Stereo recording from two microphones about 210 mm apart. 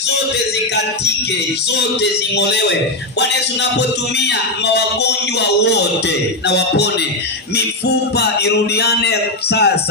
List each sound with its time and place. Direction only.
2.3 s music: 55° left (ahead or behind)